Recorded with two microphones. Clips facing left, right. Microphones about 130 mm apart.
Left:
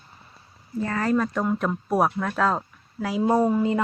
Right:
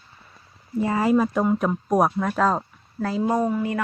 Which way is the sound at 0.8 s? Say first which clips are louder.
Right 4 dB; 15° right (ahead or behind).